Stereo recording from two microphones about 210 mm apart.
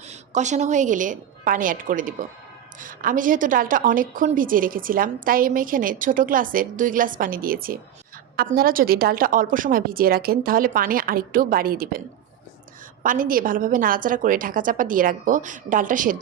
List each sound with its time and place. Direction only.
0.0 s a woman's voice: 35° right (ahead or behind)